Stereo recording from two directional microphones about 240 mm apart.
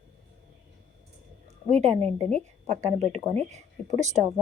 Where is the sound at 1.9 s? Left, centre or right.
Centre.